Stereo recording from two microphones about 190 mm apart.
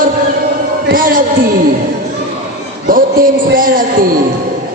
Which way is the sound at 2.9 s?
45° right (ahead or behind).